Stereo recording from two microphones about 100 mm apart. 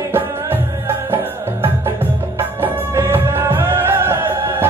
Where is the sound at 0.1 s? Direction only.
20° right (ahead or behind).